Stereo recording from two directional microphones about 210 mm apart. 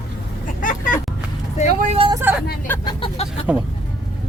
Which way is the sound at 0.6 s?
40° left (ahead or behind).